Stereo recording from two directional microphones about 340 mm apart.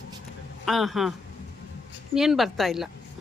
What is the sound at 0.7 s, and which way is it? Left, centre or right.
Speech, centre.